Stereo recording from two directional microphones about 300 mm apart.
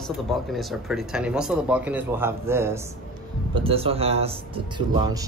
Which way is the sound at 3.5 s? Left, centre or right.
Centre.